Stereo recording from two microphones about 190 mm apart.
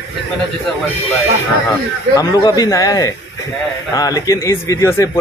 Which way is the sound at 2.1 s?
20° left (ahead or behind).